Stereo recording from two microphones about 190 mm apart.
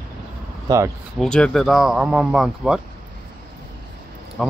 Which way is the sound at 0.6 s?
15° right (ahead or behind).